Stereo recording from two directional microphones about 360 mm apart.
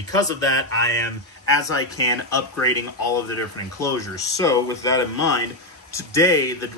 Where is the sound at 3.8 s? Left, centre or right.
Centre.